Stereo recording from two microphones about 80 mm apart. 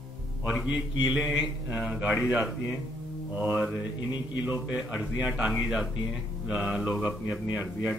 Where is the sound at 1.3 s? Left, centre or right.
Centre.